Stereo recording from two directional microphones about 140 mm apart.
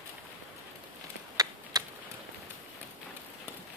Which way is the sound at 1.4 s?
25° right (ahead or behind).